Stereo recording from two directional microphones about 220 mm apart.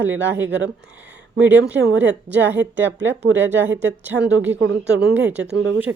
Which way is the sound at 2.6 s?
55° right (ahead or behind).